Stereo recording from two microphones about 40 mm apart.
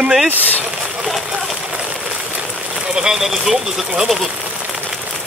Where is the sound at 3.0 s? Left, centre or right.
Centre.